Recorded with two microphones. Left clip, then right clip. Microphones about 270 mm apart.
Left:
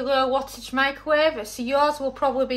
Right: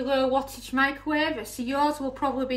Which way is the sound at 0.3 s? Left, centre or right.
Left.